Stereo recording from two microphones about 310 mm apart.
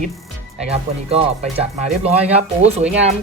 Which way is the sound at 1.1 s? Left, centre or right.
Centre.